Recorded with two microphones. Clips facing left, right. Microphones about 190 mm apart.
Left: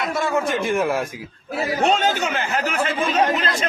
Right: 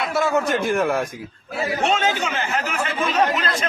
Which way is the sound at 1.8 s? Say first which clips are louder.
Left 2 dB; 35° left (ahead or behind).